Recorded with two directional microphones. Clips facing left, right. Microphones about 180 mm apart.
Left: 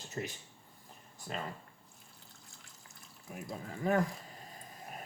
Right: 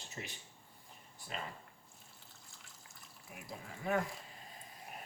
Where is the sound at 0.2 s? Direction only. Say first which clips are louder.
Left 8 dB; 55° left (ahead or behind).